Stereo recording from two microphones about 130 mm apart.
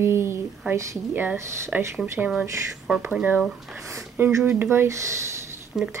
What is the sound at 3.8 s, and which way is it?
Speech, 20° right (ahead or behind).